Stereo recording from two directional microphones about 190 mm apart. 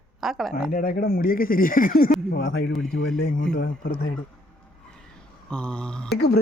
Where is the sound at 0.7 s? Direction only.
50° left (ahead or behind).